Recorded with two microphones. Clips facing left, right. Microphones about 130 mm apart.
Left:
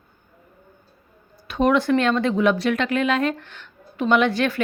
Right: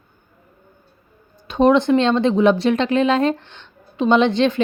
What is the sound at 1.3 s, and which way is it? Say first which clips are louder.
Speech: right 5 dB; 25° right (ahead or behind).